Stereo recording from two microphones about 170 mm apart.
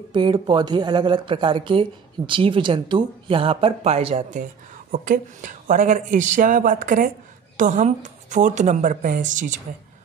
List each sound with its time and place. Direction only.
0.1 s speech: 25° right (ahead or behind)
4.9 s a woman's voice: 50° right (ahead or behind)